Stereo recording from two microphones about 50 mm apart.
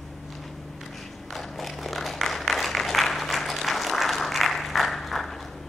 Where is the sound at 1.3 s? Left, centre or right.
Centre.